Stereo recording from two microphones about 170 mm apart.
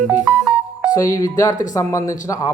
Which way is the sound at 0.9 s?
20° left (ahead or behind).